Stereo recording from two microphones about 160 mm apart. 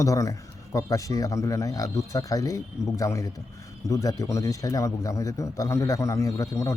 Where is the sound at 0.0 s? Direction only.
20° left (ahead or behind).